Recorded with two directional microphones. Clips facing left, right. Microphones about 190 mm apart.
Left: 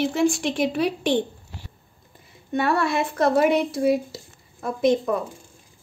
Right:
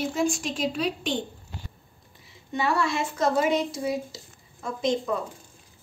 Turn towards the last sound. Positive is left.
turn(degrees=60)  # may be behind; listen again after turning